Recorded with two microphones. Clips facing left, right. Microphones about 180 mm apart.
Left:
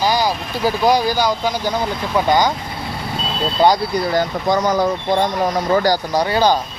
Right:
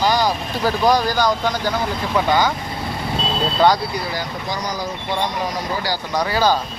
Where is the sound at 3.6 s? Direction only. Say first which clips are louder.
Left 2 dB; 10° left (ahead or behind).